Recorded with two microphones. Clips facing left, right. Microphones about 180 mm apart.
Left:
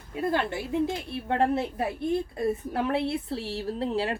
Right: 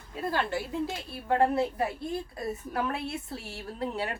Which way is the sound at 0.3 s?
20° left (ahead or behind).